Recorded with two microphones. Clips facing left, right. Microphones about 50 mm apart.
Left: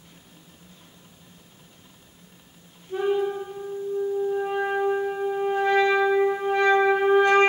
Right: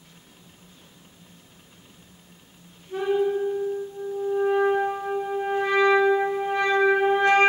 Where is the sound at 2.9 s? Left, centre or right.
Centre.